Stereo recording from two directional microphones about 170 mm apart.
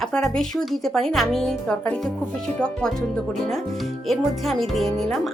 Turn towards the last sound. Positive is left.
turn(degrees=0)  # may be behind; listen again after turning